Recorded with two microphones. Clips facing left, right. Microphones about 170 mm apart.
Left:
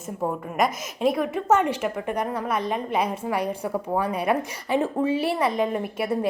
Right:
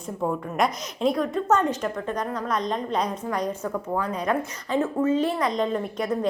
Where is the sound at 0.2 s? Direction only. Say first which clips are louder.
Even; 5° left (ahead or behind).